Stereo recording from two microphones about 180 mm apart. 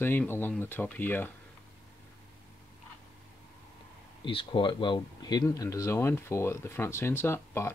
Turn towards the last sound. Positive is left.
turn(degrees=15)  # may be behind; listen again after turning